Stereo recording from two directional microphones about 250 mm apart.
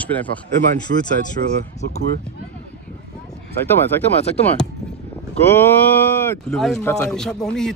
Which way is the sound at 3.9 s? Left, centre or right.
Centre.